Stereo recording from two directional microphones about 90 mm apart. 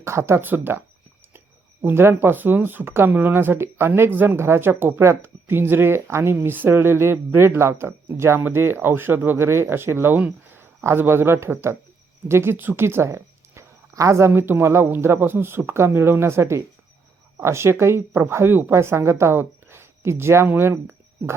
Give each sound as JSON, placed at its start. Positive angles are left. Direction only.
{"t": 0.0, "sound": "speech", "side_deg": -30}